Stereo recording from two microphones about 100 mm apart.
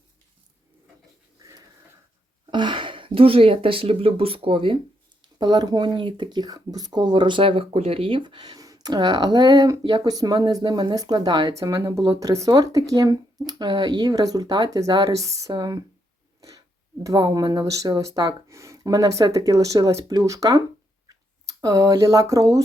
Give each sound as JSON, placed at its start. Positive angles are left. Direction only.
{"t": 1.4, "sound": "dog", "side_deg": -35}
{"t": 2.5, "sound": "speech", "side_deg": -50}
{"t": 5.4, "sound": "speech", "side_deg": -45}
{"t": 11.5, "sound": "speech", "side_deg": -30}